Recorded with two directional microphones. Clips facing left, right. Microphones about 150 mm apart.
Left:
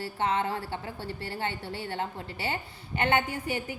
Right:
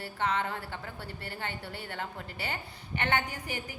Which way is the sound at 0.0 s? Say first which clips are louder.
Left 3 dB; 30° left (ahead or behind).